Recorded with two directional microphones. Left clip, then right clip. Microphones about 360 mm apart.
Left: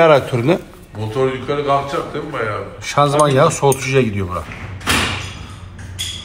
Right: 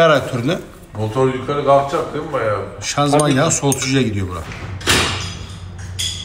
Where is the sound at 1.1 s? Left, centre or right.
Centre.